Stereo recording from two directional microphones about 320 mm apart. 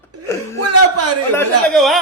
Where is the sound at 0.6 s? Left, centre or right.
Right.